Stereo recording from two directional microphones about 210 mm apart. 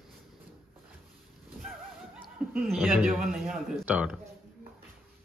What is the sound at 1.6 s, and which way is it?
Speech, 5° right (ahead or behind).